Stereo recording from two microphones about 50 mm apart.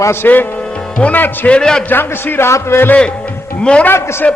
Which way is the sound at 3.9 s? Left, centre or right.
Left.